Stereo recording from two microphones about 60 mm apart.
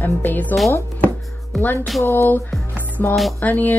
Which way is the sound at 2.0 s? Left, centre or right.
Left.